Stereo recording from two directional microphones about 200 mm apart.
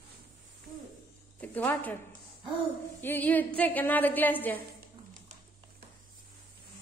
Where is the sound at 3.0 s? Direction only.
10° left (ahead or behind).